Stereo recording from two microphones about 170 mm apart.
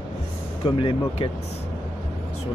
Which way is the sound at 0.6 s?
30° left (ahead or behind).